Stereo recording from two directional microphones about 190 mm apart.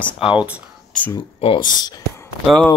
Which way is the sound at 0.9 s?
10° left (ahead or behind).